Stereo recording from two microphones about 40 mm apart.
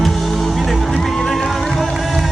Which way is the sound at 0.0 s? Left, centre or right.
Centre.